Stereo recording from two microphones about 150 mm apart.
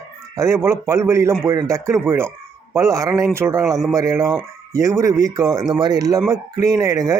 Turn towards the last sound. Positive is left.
turn(degrees=-20)  # may be behind; listen again after turning